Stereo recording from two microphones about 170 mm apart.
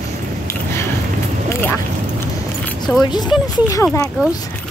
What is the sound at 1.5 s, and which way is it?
Vehicle, 10° left (ahead or behind).